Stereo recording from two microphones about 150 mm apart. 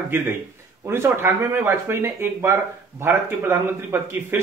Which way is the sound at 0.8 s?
15° right (ahead or behind).